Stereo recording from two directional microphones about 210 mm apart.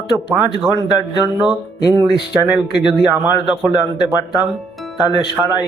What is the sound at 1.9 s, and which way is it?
Speech, 25° right (ahead or behind).